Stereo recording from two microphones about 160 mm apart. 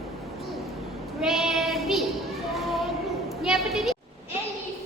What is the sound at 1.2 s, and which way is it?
Child singing, centre (ahead or behind).